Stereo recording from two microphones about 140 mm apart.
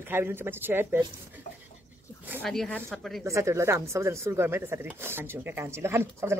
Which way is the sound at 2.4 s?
5° left (ahead or behind).